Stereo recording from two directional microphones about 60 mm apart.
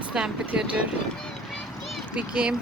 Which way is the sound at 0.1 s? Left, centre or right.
Centre.